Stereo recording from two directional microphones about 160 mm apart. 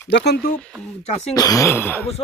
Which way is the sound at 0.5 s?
5° left (ahead or behind).